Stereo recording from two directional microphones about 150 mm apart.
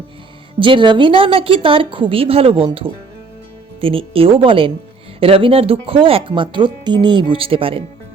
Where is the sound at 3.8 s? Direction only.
40° right (ahead or behind).